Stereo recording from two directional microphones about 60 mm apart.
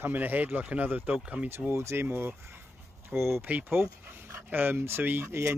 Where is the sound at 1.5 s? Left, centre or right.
Right.